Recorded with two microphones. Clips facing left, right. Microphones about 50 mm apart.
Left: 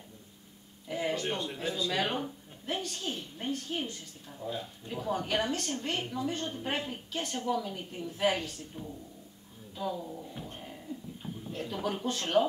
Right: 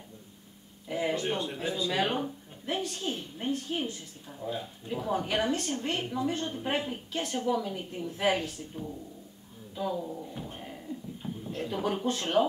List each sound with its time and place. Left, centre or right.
0.8 s speech: centre